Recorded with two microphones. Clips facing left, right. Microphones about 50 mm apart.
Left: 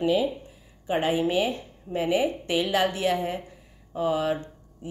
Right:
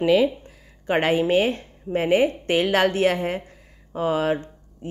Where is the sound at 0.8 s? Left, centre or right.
Right.